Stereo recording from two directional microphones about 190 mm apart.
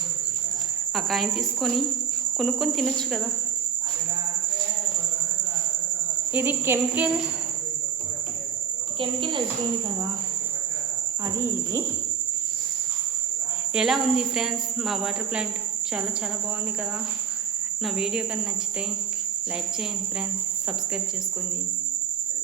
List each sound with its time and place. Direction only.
0.9 s speech: centre (ahead or behind)
6.3 s insect: 10° right (ahead or behind)
9.0 s speech: 25° right (ahead or behind)
11.3 s insect: 15° right (ahead or behind)
13.7 s speech: centre (ahead or behind)
17.8 s speech: 5° right (ahead or behind)